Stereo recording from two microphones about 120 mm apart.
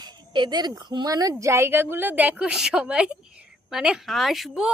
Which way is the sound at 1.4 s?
20° right (ahead or behind).